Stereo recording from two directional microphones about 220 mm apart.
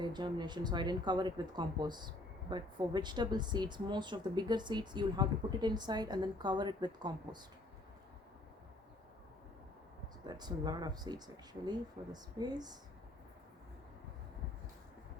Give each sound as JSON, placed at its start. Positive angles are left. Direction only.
{"t": 0.0, "sound": "speech", "side_deg": -20}
{"t": 10.2, "sound": "speech", "side_deg": -20}